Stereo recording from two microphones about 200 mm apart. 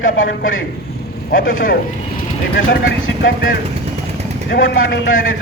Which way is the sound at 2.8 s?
70° left (ahead or behind).